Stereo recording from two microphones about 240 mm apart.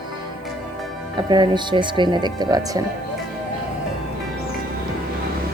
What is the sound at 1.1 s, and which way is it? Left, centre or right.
Speech, centre.